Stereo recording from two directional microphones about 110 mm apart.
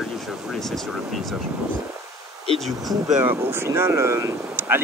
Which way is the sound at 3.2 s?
20° right (ahead or behind).